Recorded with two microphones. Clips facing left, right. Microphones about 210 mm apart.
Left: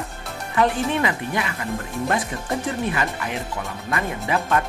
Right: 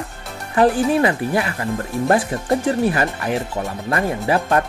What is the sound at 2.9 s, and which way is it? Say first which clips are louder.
Speech: right 5 dB; 40° right (ahead or behind).